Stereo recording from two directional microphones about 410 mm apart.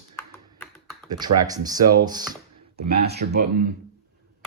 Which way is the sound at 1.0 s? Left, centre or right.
Centre.